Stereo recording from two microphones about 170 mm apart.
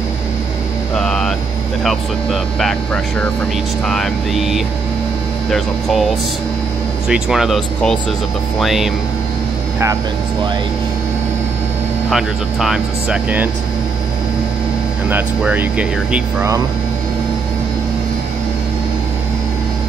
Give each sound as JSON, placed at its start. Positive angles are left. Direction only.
{"t": 0.9, "sound": "hum", "side_deg": 5}
{"t": 2.6, "sound": "speech", "side_deg": 5}
{"t": 7.1, "sound": "speech", "side_deg": -5}
{"t": 12.1, "sound": "speech", "side_deg": 0}
{"t": 15.0, "sound": "speech", "side_deg": -10}